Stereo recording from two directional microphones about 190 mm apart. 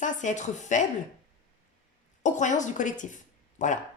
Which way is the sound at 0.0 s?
40° left (ahead or behind).